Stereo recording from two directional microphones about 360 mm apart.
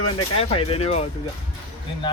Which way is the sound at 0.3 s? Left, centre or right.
Centre.